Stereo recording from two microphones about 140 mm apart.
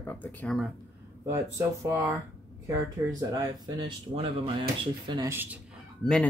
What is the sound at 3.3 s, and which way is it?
Speech, 35° right (ahead or behind).